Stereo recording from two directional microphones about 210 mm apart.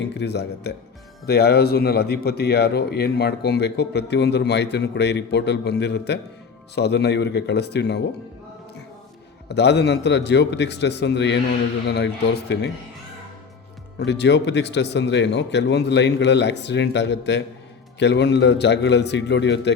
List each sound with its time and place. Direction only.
0.0 s a man's voice: 55° left (ahead or behind)
9.5 s speech: 55° left (ahead or behind)
14.0 s speech: 55° left (ahead or behind)